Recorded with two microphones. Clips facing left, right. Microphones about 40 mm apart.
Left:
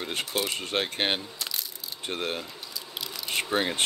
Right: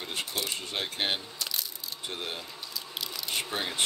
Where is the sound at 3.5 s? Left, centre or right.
Left.